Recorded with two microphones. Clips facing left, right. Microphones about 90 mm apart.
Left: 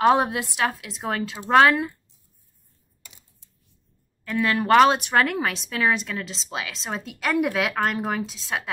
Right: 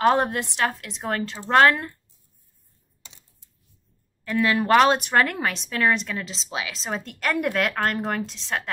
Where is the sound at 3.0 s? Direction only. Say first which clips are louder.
Right 1 dB; 25° right (ahead or behind).